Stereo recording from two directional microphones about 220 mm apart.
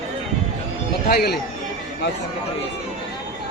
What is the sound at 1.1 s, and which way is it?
Speech, 45° left (ahead or behind).